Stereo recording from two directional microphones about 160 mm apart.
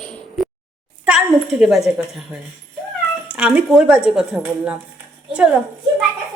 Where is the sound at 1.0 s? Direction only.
5° right (ahead or behind).